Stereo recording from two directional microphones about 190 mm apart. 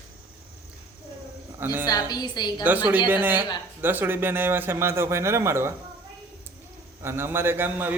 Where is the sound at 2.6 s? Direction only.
10° right (ahead or behind).